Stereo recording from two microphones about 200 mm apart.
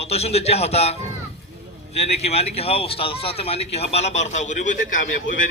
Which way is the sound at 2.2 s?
30° left (ahead or behind).